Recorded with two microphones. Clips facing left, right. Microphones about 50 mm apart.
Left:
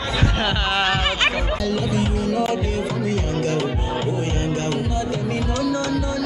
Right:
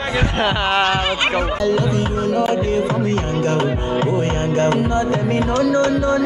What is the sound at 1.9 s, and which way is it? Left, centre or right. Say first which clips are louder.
Music: right 3 dB; right.